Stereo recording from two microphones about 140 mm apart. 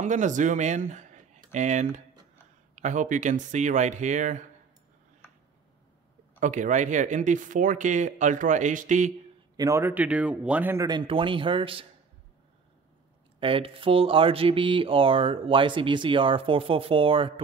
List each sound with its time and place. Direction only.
0.0 s speech: 60° right (ahead or behind)
6.4 s speech: 65° right (ahead or behind)
9.6 s speech: 20° right (ahead or behind)
10.9 s speech: 35° right (ahead or behind)
13.4 s speech: 40° right (ahead or behind)